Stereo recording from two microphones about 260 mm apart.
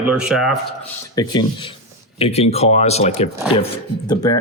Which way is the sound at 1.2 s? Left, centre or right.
Centre.